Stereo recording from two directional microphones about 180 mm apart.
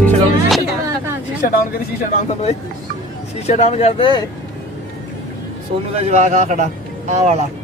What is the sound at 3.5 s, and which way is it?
Speech, 35° left (ahead or behind).